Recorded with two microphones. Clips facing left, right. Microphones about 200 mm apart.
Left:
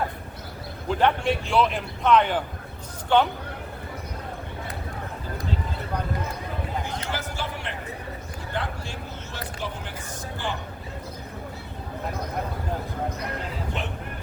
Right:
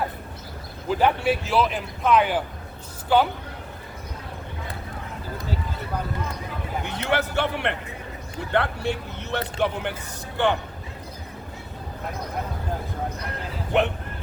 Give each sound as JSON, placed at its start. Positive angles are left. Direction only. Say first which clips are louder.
{"t": 0.9, "sound": "a man's voice", "louder": "right 1 dB", "side_deg": -5}
{"t": 6.8, "sound": "a man's voice", "louder": "right 6 dB", "side_deg": -65}
{"t": 13.7, "sound": "a man's voice", "louder": "right 14 dB", "side_deg": -65}